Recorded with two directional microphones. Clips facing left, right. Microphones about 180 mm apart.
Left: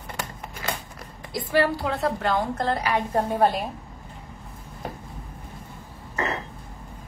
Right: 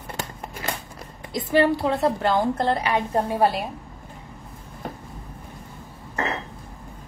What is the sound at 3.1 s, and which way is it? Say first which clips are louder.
Speech: even; 10° right (ahead or behind).